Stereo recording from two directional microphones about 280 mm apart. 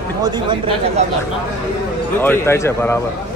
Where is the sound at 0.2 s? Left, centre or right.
Centre.